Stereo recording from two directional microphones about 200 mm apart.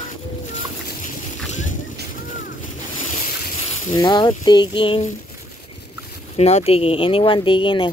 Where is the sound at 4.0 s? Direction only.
20° left (ahead or behind).